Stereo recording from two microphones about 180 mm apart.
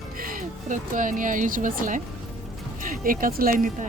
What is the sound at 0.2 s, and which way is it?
Speech, 50° right (ahead or behind).